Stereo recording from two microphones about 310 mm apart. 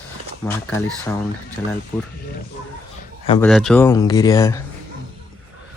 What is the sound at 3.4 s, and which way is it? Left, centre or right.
Speech, centre.